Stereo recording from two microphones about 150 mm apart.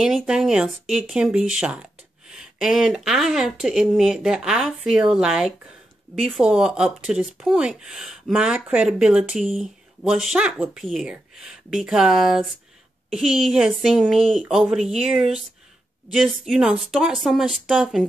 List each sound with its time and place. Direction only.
0.0 s speech: 5° right (ahead or behind)